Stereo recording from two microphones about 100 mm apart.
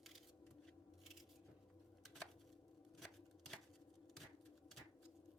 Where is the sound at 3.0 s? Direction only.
Centre (ahead or behind).